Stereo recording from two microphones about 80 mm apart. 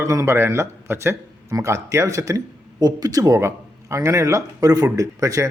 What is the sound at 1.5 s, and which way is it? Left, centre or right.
Speech, right.